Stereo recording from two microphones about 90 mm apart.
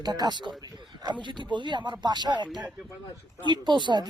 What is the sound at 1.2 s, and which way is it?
Speech, 60° right (ahead or behind).